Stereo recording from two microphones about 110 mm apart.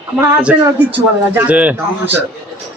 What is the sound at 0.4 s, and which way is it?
Speech, 15° right (ahead or behind).